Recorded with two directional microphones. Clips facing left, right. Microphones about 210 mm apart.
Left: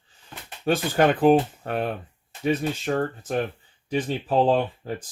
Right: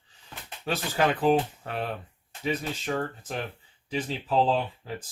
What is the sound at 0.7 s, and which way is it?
Speech, 50° left (ahead or behind).